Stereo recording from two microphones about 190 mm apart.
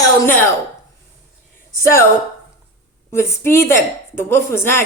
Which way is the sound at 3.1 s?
15° left (ahead or behind).